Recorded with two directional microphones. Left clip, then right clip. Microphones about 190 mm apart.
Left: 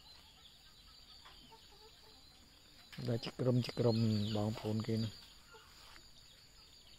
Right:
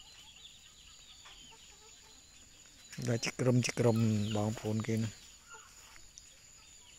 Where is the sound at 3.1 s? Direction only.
15° right (ahead or behind).